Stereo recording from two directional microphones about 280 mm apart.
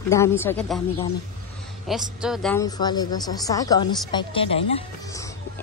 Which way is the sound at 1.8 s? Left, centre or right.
Centre.